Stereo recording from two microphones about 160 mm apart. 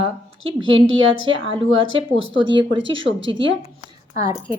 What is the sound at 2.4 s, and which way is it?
Speech, 30° right (ahead or behind).